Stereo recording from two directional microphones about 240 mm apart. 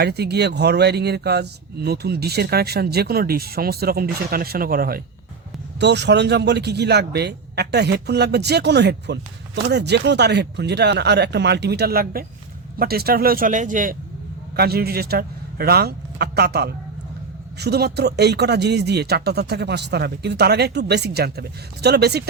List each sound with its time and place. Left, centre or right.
0.0 s speech: right